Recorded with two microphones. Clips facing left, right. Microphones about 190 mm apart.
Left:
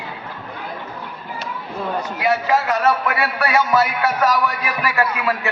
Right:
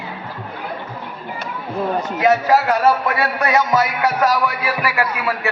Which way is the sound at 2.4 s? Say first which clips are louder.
Right 3 dB; 40° right (ahead or behind).